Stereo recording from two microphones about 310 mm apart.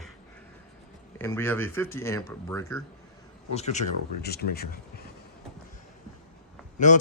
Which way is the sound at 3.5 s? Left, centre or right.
Left.